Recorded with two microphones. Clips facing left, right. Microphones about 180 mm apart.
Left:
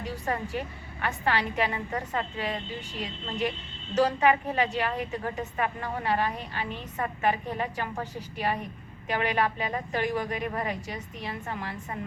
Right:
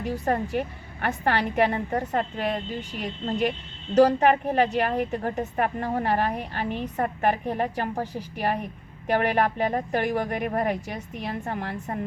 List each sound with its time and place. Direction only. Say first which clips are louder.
0.0 s a woman's voice: right 6 dB; 50° right (ahead or behind)
9.0 s a woman's voice: right 5 dB; 50° right (ahead or behind)